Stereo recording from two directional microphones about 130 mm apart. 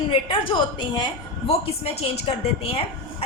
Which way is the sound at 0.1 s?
40° left (ahead or behind).